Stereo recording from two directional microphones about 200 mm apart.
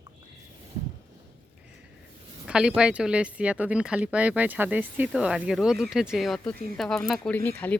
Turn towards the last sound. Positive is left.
turn(degrees=10)  # may be behind; listen again after turning